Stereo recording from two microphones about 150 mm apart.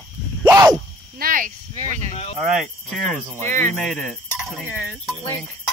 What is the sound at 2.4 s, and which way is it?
Speech, centre (ahead or behind).